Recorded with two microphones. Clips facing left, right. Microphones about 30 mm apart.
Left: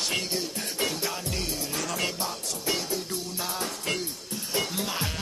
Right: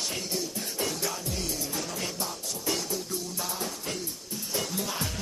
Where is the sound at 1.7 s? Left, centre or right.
Left.